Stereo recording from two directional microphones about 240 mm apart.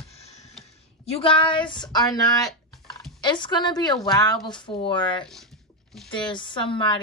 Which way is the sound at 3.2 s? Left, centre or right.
Centre.